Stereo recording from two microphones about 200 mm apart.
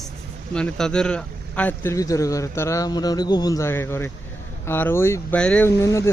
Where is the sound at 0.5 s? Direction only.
5° left (ahead or behind).